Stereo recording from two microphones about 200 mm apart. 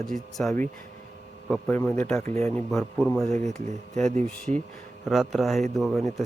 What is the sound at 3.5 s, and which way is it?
Speech, 35° right (ahead or behind).